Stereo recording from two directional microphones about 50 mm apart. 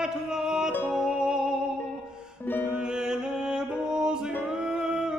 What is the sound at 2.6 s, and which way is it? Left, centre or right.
Music, centre.